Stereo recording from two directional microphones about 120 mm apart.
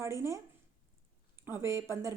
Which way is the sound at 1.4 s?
20° right (ahead or behind).